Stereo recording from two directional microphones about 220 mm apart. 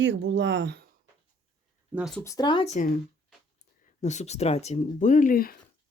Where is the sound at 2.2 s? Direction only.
15° left (ahead or behind); by 3.0 s 35° left (ahead or behind).